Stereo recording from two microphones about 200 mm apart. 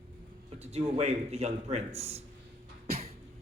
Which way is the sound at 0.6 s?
30° right (ahead or behind).